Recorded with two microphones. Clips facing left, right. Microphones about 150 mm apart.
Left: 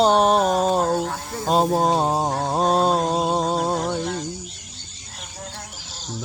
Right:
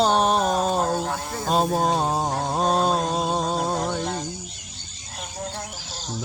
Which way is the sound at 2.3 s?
35° left (ahead or behind).